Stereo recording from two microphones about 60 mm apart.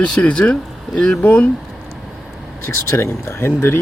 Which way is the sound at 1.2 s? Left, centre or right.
Left.